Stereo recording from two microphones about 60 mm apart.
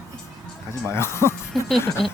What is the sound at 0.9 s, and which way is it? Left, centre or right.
Speech, left.